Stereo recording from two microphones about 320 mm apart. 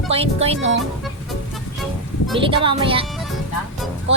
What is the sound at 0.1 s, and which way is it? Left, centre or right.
Speech, centre.